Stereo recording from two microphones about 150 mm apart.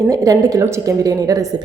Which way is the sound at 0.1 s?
20° right (ahead or behind).